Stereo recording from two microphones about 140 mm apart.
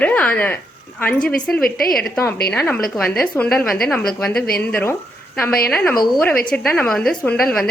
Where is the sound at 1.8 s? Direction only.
90° left.